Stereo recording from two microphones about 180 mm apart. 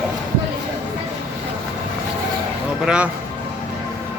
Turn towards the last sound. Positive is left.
turn(degrees=-5)  # may be behind; listen again after turning